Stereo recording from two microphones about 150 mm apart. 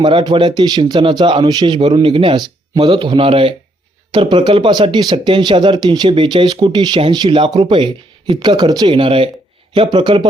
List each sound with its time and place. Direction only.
0.0 s speech: 35° right (ahead or behind)